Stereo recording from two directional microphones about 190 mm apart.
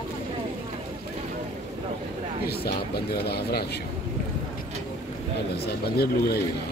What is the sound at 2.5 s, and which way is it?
Speech, 55° left (ahead or behind).